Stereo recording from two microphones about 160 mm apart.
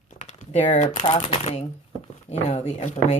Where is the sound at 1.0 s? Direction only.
40° left (ahead or behind).